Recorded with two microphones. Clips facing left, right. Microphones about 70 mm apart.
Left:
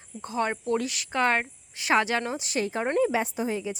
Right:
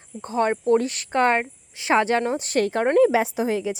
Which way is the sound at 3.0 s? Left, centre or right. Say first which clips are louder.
Right 7 dB; right.